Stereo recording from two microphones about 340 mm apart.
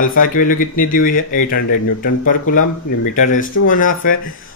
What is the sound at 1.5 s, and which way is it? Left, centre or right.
Speech, left.